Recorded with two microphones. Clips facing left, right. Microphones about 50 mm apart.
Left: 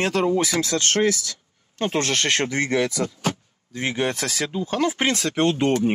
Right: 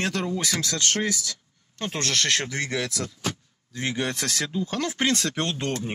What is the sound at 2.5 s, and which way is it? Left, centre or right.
Speech, centre.